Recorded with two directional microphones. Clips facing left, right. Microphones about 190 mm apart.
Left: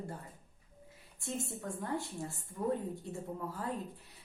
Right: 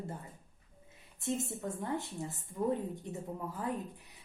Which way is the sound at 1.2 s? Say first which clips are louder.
Right 4 dB; 20° right (ahead or behind).